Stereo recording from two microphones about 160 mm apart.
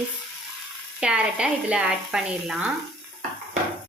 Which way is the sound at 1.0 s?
5° right (ahead or behind).